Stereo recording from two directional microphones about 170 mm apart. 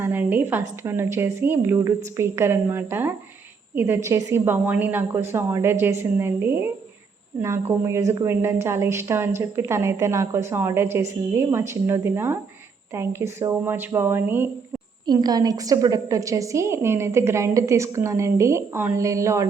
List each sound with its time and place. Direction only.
0.0 s a woman's voice: 10° right (ahead or behind)
15.0 s a woman's voice: 25° right (ahead or behind)